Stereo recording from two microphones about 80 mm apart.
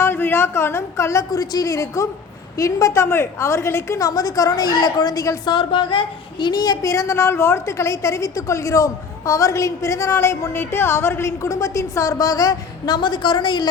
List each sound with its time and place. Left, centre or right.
0.0 s speech: left
1.3 s a woman's voice: left
5.5 s speech: left
6.4 s a woman's voice: left
6.8 s a woman's voice: left